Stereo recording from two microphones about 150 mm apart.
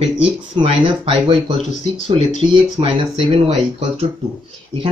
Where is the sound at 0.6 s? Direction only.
35° right (ahead or behind).